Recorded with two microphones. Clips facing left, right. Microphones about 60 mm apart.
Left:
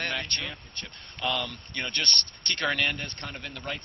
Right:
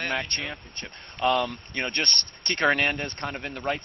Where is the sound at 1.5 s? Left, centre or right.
Right.